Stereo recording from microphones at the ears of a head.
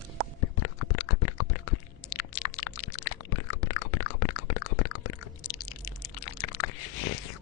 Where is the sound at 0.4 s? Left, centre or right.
Left.